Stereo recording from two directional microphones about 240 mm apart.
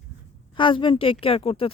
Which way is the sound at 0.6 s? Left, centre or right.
Left.